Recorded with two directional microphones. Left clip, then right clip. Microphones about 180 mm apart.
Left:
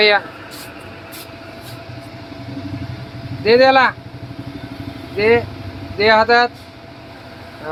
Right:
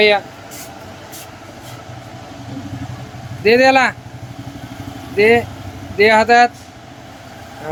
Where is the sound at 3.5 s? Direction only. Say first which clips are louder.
Even; 40° right (ahead or behind).